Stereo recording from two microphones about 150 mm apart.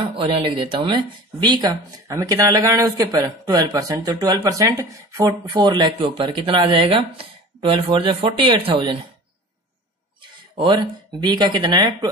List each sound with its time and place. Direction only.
0.1 s speech: 35° right (ahead or behind)
10.6 s speech: 30° right (ahead or behind)